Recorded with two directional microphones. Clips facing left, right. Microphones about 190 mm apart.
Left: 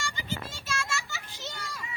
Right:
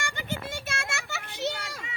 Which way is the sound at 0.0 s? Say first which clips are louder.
Right 2 dB; 60° right (ahead or behind).